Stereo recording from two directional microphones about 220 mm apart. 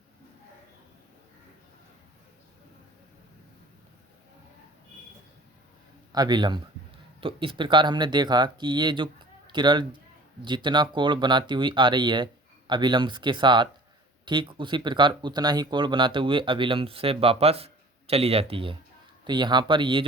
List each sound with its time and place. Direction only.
6.1 s a man's voice: 20° right (ahead or behind)